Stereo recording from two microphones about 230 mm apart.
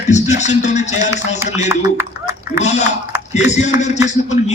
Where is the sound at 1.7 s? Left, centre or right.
Centre.